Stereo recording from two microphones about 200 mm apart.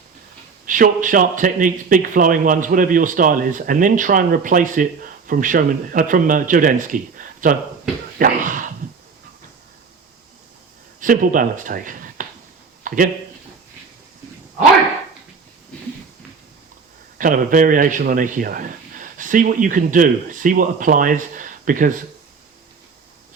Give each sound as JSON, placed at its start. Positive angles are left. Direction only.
{"t": 0.6, "sound": "a man's voice", "side_deg": -40}
{"t": 11.0, "sound": "speech", "side_deg": -40}
{"t": 12.8, "sound": "a sound", "side_deg": -40}
{"t": 17.2, "sound": "a man's voice", "side_deg": -40}